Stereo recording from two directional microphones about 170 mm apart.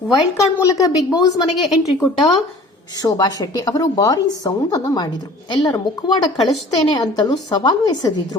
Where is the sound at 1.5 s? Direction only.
Centre (ahead or behind).